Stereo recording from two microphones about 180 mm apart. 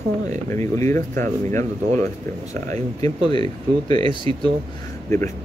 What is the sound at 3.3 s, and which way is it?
Speech, 25° left (ahead or behind).